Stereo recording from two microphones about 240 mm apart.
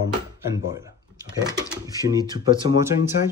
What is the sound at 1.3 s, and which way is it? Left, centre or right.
Speech, centre.